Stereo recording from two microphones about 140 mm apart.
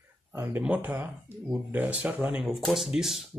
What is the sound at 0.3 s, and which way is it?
Speech, 15° right (ahead or behind).